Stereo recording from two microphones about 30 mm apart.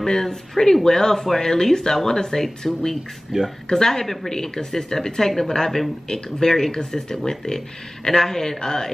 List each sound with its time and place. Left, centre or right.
0.0 s speech: centre
3.3 s speech: right
3.7 s speech: centre
4.0 s speech: centre
4.3 s speech: centre